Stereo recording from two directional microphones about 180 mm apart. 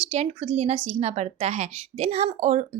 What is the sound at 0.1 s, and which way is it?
Speech, 35° right (ahead or behind).